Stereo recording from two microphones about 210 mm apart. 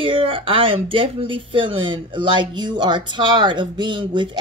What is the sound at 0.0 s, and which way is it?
Speech, 25° right (ahead or behind).